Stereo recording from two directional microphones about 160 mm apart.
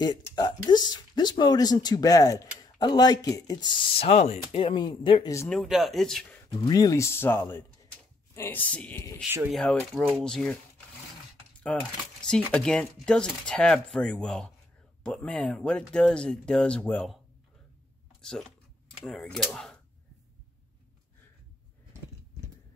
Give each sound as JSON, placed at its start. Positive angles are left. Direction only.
{"t": 0.0, "sound": "speech", "side_deg": 25}
{"t": 5.5, "sound": "speech", "side_deg": 0}
{"t": 6.5, "sound": "speech", "side_deg": 20}
{"t": 9.2, "sound": "speech", "side_deg": -10}
{"t": 9.5, "sound": "speech", "side_deg": 0}
{"t": 11.6, "sound": "speech", "side_deg": 5}
{"t": 18.2, "sound": "speech", "side_deg": 5}